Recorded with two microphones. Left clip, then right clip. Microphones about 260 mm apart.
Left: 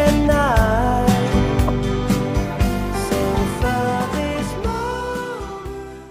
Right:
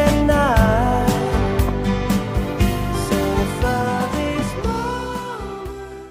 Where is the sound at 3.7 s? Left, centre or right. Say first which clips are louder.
Left 1 dB; centre.